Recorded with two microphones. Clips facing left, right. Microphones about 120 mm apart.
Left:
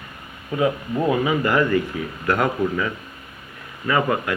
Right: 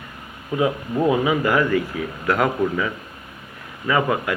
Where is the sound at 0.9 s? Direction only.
5° right (ahead or behind).